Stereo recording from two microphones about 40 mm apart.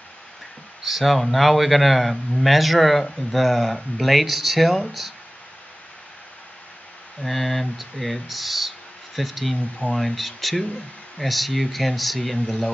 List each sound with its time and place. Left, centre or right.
0.8 s speech: centre
7.2 s speech: centre